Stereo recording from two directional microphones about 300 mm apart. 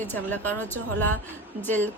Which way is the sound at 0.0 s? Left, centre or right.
Centre.